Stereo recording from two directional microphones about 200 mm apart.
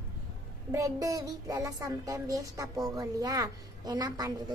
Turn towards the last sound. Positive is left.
turn(degrees=-20)  # may be behind; listen again after turning